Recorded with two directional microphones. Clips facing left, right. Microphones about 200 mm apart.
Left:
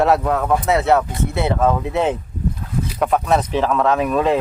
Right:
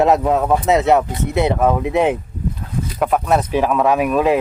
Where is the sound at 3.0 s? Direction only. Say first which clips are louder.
Right 1 dB; 5° right (ahead or behind).